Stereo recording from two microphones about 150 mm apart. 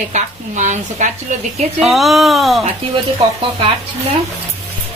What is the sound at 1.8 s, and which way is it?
Speech, centre (ahead or behind).